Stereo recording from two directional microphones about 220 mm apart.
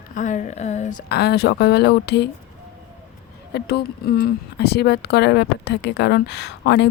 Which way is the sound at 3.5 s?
50° left (ahead or behind).